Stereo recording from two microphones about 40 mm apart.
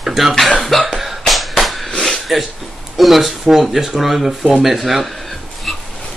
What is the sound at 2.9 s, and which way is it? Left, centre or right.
Speech, centre.